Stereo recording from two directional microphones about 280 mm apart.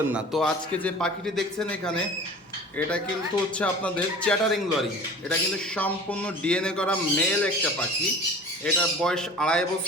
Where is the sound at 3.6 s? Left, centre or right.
Centre.